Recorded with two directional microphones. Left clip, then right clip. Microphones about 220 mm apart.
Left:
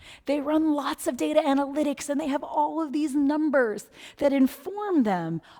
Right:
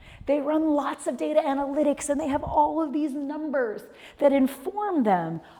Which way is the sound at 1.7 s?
25° left (ahead or behind).